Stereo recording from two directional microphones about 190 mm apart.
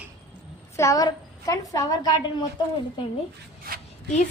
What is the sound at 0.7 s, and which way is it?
A woman's voice, 15° left (ahead or behind).